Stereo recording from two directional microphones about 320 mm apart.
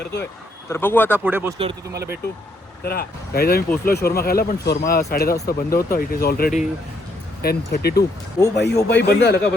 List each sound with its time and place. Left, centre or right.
0.0 s a man's voice: left
0.7 s speech: centre
1.1 s speech: centre
1.9 s speech: right
2.8 s a man's voice: left